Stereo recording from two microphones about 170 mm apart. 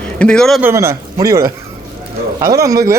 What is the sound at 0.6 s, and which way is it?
Speech, 15° right (ahead or behind).